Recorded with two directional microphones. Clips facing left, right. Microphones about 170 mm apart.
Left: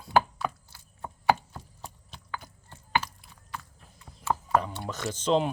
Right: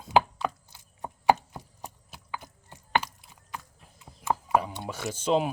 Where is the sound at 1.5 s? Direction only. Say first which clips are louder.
Right 2 dB; 10° right (ahead or behind).